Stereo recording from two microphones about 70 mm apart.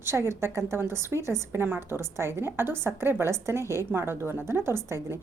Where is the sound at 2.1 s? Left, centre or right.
Right.